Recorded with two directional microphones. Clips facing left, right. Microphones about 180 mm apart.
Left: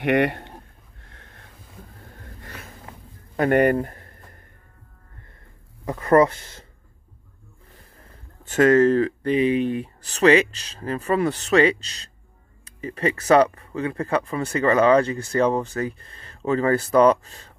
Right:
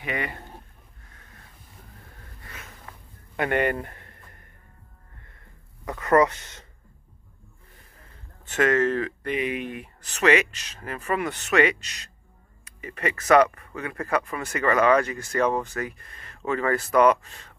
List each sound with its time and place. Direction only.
0.0 s speech: 70° left (ahead or behind)
2.5 s a sound: 35° left (ahead or behind)
5.9 s speech: 30° left (ahead or behind)
8.5 s speech: 35° left (ahead or behind)